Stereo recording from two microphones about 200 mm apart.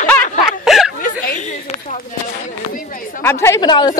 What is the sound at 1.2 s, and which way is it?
Speech, 40° left (ahead or behind).